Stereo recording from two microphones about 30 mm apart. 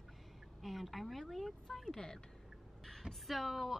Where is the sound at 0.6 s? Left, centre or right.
Centre.